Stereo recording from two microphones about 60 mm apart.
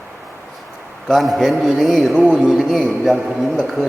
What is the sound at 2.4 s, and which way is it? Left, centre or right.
Speech, centre.